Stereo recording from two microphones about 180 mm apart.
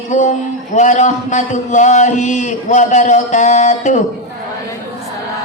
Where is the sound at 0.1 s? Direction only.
45° left (ahead or behind).